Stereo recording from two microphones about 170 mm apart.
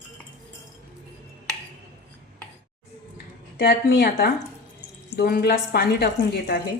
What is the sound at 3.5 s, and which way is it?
A woman's voice, 80° left.